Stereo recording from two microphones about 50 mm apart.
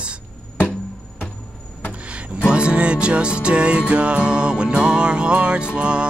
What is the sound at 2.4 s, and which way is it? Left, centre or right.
Music, right.